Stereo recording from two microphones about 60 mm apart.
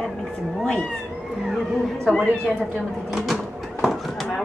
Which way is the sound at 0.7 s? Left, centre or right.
Centre.